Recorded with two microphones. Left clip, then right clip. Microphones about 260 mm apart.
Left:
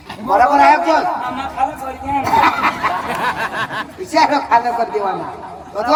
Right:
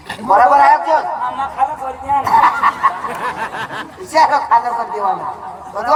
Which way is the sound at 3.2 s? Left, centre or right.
Centre.